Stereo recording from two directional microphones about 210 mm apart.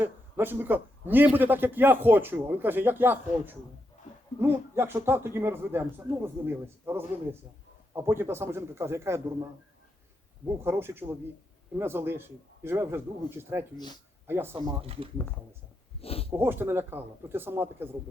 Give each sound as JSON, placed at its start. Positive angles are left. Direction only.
{"t": 0.0, "sound": "a man's voice", "side_deg": -10}
{"t": 10.6, "sound": "a man's voice", "side_deg": -10}
{"t": 13.7, "sound": "speech", "side_deg": 20}
{"t": 14.3, "sound": "a man's voice", "side_deg": -10}
{"t": 14.5, "sound": "speech", "side_deg": -25}
{"t": 16.0, "sound": "a sound", "side_deg": 30}
{"t": 16.3, "sound": "a man's voice", "side_deg": -10}